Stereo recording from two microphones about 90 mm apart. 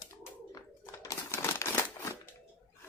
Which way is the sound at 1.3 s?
30° left (ahead or behind).